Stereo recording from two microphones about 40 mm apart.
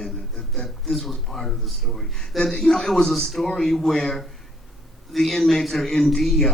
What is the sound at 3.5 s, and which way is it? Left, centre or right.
Speech, centre.